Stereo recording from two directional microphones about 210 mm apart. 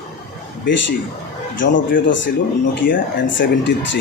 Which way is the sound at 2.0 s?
60° left (ahead or behind).